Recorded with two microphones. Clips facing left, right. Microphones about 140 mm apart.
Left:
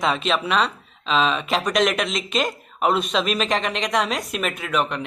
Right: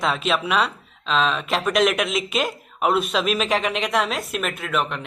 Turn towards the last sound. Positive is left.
turn(degrees=0)  # may be behind; listen again after turning